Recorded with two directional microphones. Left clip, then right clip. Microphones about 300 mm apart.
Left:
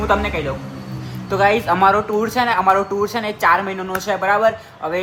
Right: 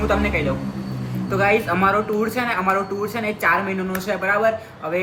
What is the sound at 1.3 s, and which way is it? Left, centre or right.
Speech, centre.